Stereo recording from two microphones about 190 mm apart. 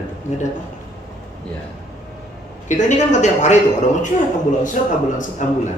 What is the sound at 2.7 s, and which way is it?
A man's voice, 40° left (ahead or behind).